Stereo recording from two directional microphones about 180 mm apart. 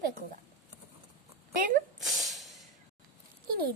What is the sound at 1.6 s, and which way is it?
Speech, 50° right (ahead or behind).